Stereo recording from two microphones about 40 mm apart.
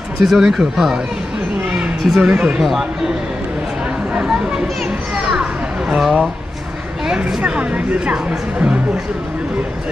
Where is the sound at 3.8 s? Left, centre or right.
Right.